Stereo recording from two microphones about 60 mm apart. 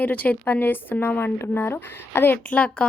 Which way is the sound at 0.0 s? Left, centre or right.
Left.